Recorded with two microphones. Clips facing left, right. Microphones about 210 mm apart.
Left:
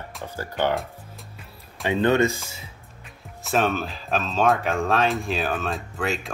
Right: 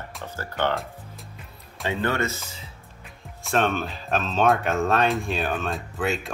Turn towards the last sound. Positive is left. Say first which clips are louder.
# right 1 dB
turn(degrees=0)  # may be behind; listen again after turning